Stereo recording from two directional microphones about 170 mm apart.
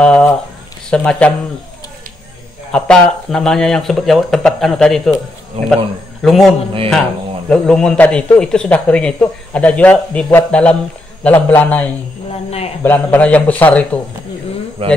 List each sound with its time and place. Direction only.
0.0 s speech: 5° left (ahead or behind)
2.7 s speech: 5° left (ahead or behind)
5.6 s speech: 35° right (ahead or behind)
6.2 s a man's voice: centre (ahead or behind)
12.4 s speech: 35° left (ahead or behind)
12.8 s a man's voice: 10° left (ahead or behind)
14.8 s speech: 35° right (ahead or behind)